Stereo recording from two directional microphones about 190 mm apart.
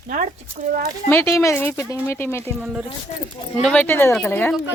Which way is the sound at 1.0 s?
15° left (ahead or behind).